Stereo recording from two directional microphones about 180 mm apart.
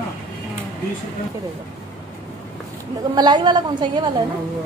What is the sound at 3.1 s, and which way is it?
A woman's voice, 25° right (ahead or behind).